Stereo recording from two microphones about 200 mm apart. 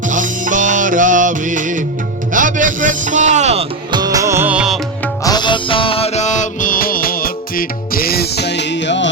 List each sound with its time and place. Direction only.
0.1 s music: 40° right (ahead or behind)
4.0 s music: 15° right (ahead or behind)
5.2 s music: 20° left (ahead or behind); by 9.0 s 65° left (ahead or behind)